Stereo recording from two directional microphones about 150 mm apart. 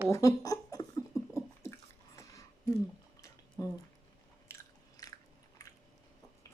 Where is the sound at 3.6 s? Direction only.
25° left (ahead or behind).